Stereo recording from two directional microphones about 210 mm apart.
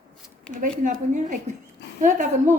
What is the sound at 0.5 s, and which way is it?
A woman's voice, 40° right (ahead or behind).